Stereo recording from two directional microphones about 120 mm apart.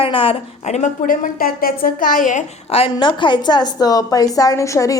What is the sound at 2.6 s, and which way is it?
A woman's voice, 55° left (ahead or behind).